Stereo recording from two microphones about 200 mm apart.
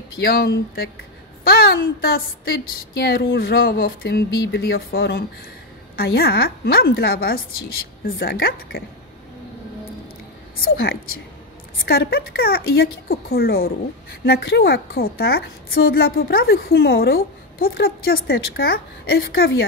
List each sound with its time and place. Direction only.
0.2 s a woman's voice: 50° left (ahead or behind)
11.8 s a woman's voice: 50° left (ahead or behind)